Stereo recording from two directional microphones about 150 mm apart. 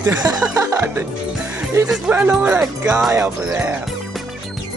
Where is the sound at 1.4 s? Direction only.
5° right (ahead or behind).